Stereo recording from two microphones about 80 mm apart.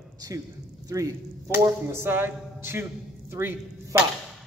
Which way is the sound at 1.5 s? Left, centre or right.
Right.